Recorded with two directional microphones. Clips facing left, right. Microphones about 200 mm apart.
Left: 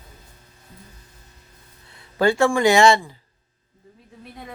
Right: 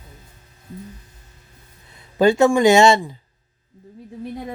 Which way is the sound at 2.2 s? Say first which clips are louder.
Right 4 dB; 20° right (ahead or behind).